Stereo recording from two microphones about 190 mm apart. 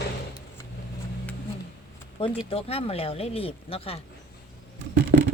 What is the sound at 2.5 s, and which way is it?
Speech, 30° left (ahead or behind).